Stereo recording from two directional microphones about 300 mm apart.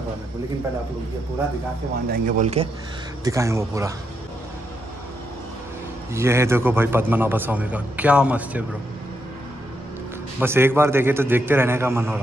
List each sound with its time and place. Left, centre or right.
2.0 s speech: right
3.3 s a man's voice: centre
6.1 s a man's voice: centre
10.4 s a man's voice: centre